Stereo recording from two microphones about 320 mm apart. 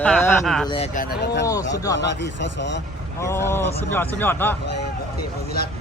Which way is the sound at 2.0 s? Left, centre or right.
Left.